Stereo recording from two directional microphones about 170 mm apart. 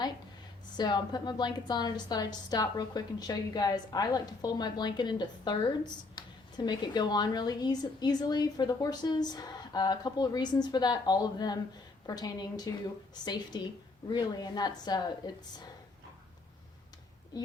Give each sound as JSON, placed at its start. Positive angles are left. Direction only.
{"t": 0.8, "sound": "a woman's voice", "side_deg": 25}